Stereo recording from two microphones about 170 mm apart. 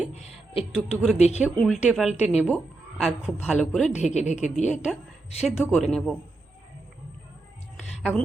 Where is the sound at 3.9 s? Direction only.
45° left (ahead or behind).